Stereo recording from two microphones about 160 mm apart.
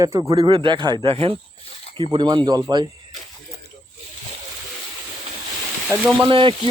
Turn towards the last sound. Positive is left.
turn(degrees=-30)  # may be behind; listen again after turning